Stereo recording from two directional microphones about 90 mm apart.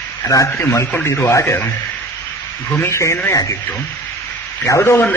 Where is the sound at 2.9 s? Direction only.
30° left (ahead or behind).